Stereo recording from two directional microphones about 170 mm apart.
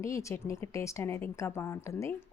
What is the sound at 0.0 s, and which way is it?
A woman's voice, 15° left (ahead or behind).